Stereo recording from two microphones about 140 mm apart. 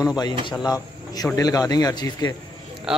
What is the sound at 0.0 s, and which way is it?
A man's voice, 30° left (ahead or behind).